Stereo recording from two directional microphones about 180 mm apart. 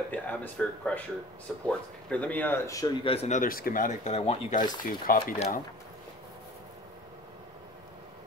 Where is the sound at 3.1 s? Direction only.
40° left (ahead or behind).